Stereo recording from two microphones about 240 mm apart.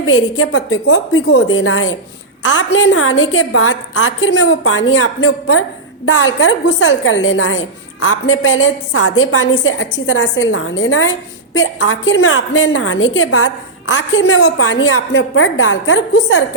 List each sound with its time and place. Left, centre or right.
0.0 s a woman's voice: left